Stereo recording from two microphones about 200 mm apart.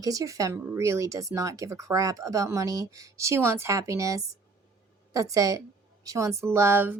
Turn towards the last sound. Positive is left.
turn(degrees=-10)  # may be behind; listen again after turning